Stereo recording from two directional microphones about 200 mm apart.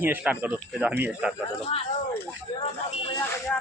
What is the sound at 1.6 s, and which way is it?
Speech, 30° left (ahead or behind).